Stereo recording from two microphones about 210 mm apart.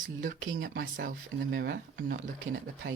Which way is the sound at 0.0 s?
40° right (ahead or behind).